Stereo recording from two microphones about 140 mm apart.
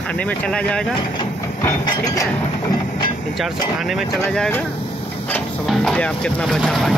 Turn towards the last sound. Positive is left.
turn(degrees=0)  # may be behind; listen again after turning